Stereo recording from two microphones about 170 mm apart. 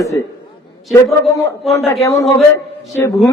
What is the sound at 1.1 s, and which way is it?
Speech, centre (ahead or behind).